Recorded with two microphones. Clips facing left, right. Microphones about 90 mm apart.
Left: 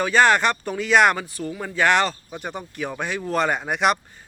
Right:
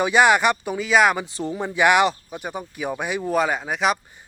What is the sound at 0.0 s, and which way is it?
A man's voice, 10° right (ahead or behind).